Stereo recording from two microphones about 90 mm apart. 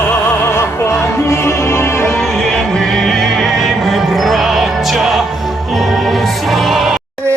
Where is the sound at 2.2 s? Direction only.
Centre (ahead or behind).